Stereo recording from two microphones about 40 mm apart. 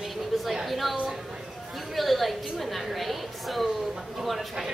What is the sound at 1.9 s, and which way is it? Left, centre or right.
A woman's voice, centre.